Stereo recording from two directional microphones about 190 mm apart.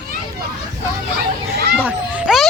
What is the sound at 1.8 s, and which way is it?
Speech, 5° right (ahead or behind).